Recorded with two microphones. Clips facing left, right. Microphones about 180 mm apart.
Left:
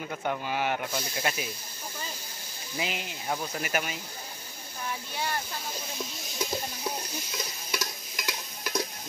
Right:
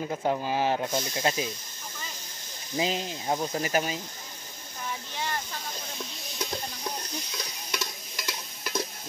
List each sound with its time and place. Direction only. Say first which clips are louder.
0.0 s speech: right 4 dB; 25° right (ahead or behind)
2.8 s speech: right 5 dB; 30° right (ahead or behind)
5.1 s speech: left 1 dB; 10° left (ahead or behind)
6.3 s a sound: left 2 dB; centre (ahead or behind)
7.7 s stir: even; centre (ahead or behind)